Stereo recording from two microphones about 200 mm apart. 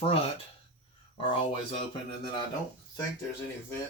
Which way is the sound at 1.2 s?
25° left (ahead or behind).